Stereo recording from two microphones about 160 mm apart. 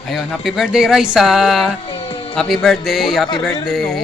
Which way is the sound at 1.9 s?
35° left (ahead or behind).